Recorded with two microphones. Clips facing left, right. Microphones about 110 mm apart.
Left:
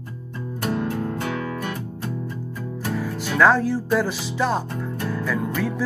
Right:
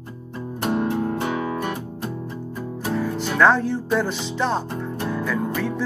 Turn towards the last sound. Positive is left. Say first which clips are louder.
# even
turn(degrees=0)  # may be behind; listen again after turning